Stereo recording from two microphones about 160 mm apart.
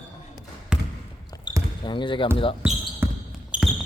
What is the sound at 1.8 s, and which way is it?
Speech, 30° left (ahead or behind).